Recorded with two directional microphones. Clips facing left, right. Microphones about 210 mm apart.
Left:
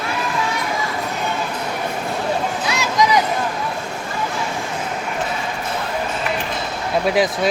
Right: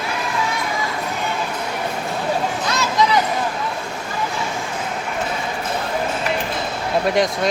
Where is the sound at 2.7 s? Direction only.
15° left (ahead or behind).